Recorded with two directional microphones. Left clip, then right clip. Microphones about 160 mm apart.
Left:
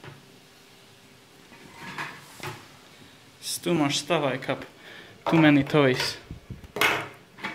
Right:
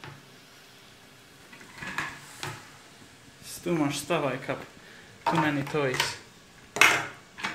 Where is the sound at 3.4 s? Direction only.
10° left (ahead or behind).